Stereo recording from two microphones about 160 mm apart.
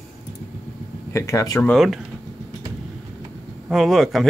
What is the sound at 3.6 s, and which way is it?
Speech, centre (ahead or behind).